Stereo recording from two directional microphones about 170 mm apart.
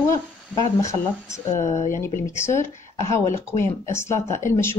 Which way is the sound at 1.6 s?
45° left (ahead or behind).